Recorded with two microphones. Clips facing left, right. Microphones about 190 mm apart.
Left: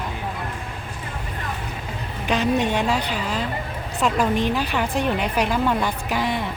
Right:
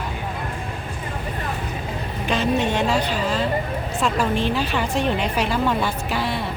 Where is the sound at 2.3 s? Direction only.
15° left (ahead or behind).